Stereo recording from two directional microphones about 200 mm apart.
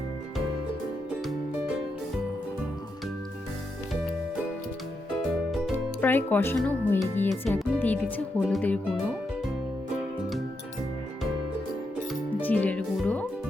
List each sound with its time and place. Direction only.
5.5 s music: 5° left (ahead or behind)
6.6 s speech: 5° left (ahead or behind)
12.4 s speech: 10° left (ahead or behind)